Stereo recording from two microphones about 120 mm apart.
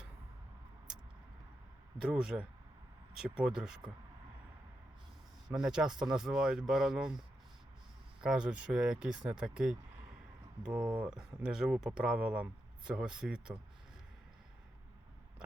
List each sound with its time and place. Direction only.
2.0 s speech: 5° right (ahead or behind)
5.5 s speech: 5° right (ahead or behind)
8.2 s speech: 5° right (ahead or behind)